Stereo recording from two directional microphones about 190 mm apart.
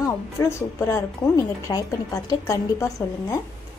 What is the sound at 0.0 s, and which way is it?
A woman's voice, 15° left (ahead or behind).